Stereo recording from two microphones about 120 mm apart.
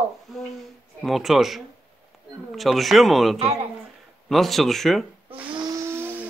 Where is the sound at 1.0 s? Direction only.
Centre (ahead or behind).